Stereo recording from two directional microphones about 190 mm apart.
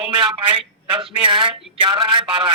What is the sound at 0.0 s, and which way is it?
A man's voice, 25° right (ahead or behind).